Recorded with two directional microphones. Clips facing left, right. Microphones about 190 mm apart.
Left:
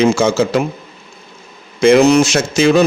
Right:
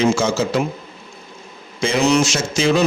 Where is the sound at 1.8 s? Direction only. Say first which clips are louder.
Left 8 dB; 55° left (ahead or behind).